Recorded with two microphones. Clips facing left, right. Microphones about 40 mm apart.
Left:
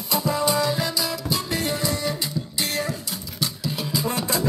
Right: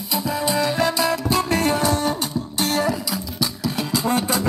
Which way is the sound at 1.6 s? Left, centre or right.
Right.